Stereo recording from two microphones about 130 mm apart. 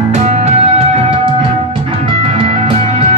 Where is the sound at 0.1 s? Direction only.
55° right (ahead or behind).